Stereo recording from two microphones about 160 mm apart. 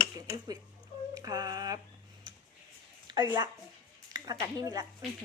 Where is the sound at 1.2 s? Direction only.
25° right (ahead or behind).